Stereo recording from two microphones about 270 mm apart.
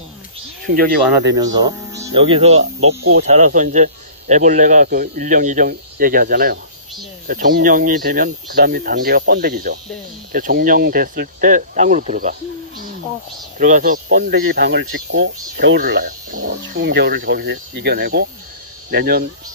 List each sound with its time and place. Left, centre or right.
0.7 s speech: right
1.3 s speech: centre; by 19.2 s right